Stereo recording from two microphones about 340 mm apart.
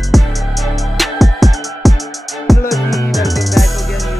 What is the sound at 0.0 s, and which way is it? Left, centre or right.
Music, centre.